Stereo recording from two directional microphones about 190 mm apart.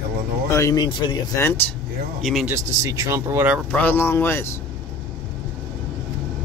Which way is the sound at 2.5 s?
15° right (ahead or behind).